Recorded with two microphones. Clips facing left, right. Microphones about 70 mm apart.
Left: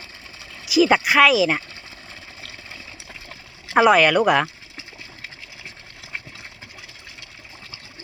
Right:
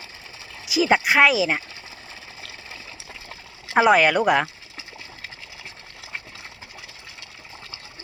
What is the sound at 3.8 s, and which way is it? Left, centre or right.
Speech, right.